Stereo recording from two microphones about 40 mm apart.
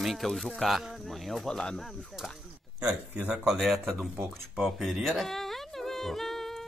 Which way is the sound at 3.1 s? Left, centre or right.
Right.